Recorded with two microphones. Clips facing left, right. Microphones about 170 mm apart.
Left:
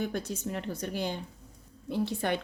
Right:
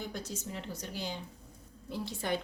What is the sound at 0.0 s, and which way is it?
Speech, 60° left (ahead or behind).